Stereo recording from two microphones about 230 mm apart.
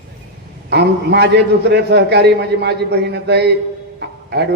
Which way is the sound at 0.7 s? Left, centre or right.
Right.